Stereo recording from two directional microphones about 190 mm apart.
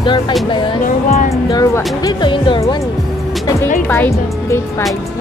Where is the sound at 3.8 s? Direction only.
10° left (ahead or behind).